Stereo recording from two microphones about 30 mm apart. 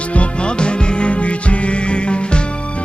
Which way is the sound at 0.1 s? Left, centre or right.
Left.